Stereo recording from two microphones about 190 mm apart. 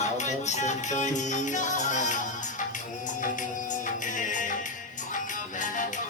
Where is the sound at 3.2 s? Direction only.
45° left (ahead or behind).